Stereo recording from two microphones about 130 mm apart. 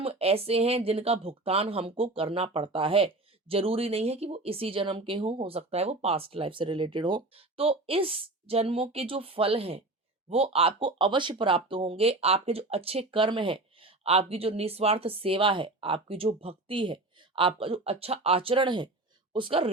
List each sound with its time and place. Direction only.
0.0 s speech: 50° right (ahead or behind)